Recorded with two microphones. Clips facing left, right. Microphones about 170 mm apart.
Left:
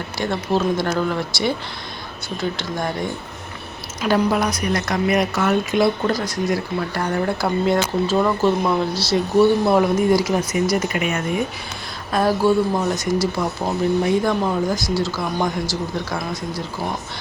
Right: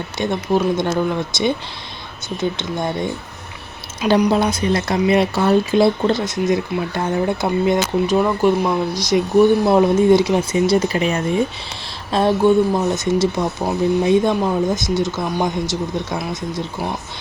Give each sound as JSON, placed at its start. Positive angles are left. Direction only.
{"t": 0.2, "sound": "speech", "side_deg": -15}